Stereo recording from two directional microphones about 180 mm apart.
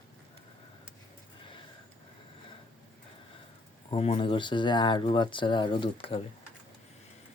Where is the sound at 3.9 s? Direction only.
30° left (ahead or behind).